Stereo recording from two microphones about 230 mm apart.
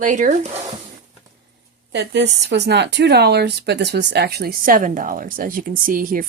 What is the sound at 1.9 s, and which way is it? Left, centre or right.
Speech, right.